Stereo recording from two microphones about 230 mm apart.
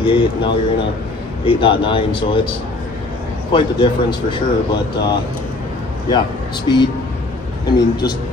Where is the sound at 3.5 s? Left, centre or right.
Centre.